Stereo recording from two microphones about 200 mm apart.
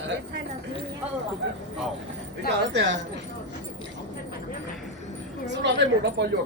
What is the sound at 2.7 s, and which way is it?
Speech, 65° right (ahead or behind).